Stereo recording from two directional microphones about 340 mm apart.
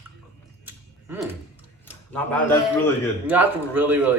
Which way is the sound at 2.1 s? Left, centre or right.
Centre.